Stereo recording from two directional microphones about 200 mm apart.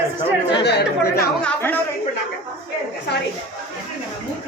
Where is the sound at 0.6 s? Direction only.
55° left (ahead or behind).